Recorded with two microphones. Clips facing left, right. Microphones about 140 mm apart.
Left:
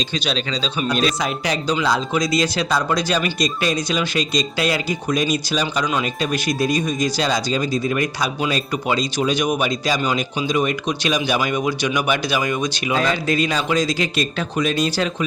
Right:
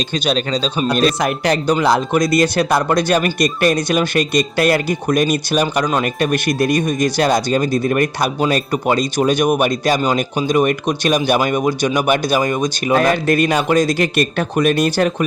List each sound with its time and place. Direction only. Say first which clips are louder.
0.3 s speech: right 9 dB; 50° right (ahead or behind)
10.0 s speech: right 4 dB; 45° right (ahead or behind)